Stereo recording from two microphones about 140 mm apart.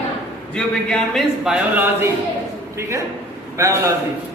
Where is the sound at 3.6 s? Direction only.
20° right (ahead or behind).